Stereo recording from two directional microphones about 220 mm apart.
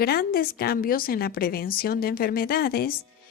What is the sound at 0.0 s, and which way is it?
A woman's voice, 45° left (ahead or behind).